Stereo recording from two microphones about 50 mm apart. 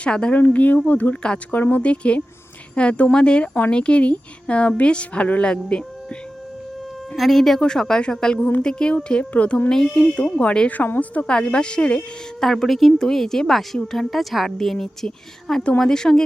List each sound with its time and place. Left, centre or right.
0.0 s speech: centre
0.3 s speech: left
1.2 s a woman's voice: centre
1.5 s speech: left
7.2 s a woman's voice: centre; by 9.6 s left
9.6 s a woman's voice: centre
12.4 s a woman's voice: centre